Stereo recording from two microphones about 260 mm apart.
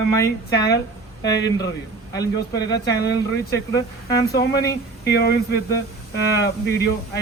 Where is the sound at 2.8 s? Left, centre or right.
Centre.